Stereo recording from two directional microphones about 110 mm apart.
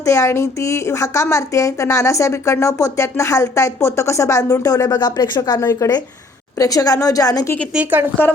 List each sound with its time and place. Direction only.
0.0 s a woman's voice: 30° left (ahead or behind)
5.5 s a woman's voice: 30° left (ahead or behind)
7.7 s a woman's voice: 15° right (ahead or behind)